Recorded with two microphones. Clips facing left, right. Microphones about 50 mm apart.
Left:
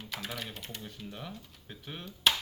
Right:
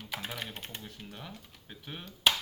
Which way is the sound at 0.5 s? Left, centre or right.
Right.